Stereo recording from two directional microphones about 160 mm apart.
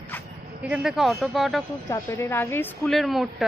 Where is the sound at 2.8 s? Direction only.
Centre (ahead or behind).